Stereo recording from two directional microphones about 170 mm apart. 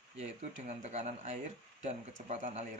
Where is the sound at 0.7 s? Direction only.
40° right (ahead or behind).